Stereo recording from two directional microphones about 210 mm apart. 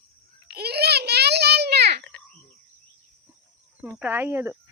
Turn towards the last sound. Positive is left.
turn(degrees=-10)  # may be behind; listen again after turning